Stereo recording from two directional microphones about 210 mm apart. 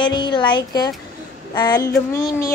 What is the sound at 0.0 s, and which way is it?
A woman's voice, 20° left (ahead or behind).